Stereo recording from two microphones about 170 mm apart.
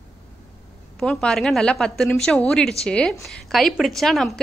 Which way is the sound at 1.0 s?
5° left (ahead or behind).